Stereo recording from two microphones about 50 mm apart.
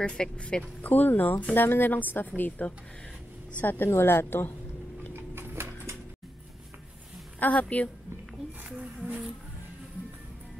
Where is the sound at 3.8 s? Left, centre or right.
Left.